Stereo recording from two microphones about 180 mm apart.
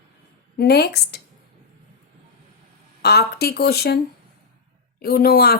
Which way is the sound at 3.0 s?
60° left (ahead or behind).